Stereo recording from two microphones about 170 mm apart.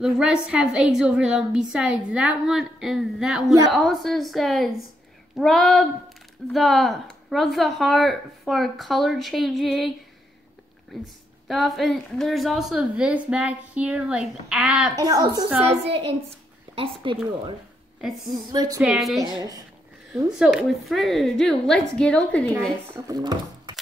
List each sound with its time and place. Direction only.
0.0 s speech: 5° right (ahead or behind)
11.4 s speech: centre (ahead or behind)
15.0 s a woman's voice: 20° right (ahead or behind)
15.7 s a woman's voice: 35° right (ahead or behind)
18.2 s a woman's voice: 25° right (ahead or behind)
18.8 s speech: centre (ahead or behind)
20.2 s speech: centre (ahead or behind)
23.0 s speech: 25° right (ahead or behind)